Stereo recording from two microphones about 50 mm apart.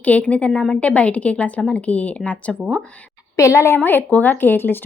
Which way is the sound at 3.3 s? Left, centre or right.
Left.